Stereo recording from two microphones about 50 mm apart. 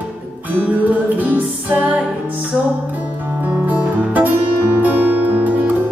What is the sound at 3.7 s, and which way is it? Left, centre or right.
Music, right.